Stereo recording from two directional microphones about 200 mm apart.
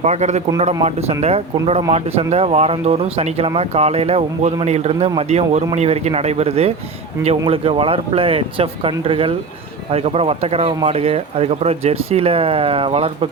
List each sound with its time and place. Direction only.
0.0 s speech: 35° right (ahead or behind)